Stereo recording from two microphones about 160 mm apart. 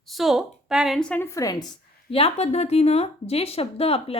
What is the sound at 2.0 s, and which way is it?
A woman's voice, 35° left (ahead or behind).